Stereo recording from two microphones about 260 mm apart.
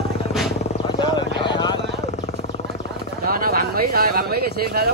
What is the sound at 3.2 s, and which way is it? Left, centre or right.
Speech, right.